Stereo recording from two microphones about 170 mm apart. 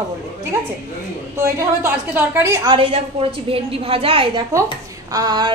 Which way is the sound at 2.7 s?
35° right (ahead or behind).